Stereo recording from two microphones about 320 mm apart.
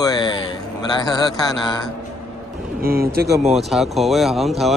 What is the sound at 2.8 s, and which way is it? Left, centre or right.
Speech, right.